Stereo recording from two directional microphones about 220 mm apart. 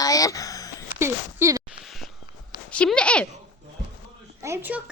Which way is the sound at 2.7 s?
5° left (ahead or behind).